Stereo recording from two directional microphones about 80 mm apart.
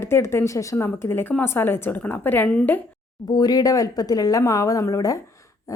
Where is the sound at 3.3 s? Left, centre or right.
Left.